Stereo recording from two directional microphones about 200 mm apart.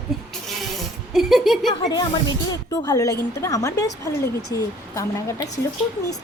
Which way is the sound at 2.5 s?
15° left (ahead or behind).